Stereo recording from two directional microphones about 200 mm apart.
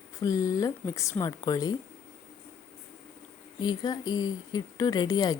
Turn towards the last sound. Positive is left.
turn(degrees=20)  # may be behind; listen again after turning